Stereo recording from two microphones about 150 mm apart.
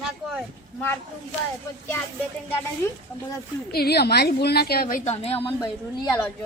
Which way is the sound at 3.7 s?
90° left.